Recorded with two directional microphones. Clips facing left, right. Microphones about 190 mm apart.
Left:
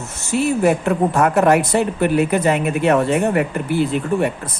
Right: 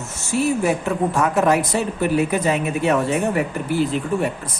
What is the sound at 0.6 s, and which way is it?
A woman's voice, 55° left (ahead or behind).